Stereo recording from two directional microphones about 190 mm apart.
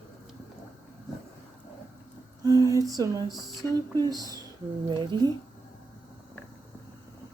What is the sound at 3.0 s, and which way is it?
Speech, 20° right (ahead or behind).